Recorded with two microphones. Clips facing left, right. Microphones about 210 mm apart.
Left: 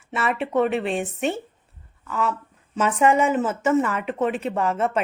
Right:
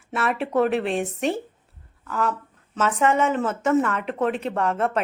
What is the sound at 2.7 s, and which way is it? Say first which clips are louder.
A woman's voice: left 2 dB; 10° left (ahead or behind).